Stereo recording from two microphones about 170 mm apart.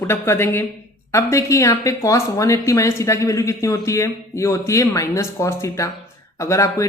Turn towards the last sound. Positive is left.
turn(degrees=20)  # may be behind; listen again after turning